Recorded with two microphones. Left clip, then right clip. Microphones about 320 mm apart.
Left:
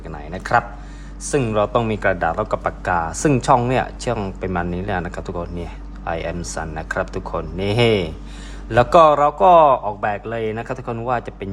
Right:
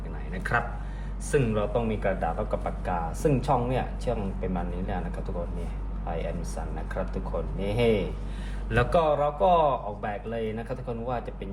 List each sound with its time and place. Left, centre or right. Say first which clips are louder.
0.4 s speech: left 10 dB; centre